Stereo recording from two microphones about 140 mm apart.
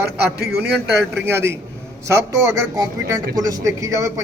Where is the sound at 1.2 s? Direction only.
20° right (ahead or behind).